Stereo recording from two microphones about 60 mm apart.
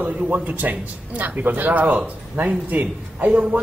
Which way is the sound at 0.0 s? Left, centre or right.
Right.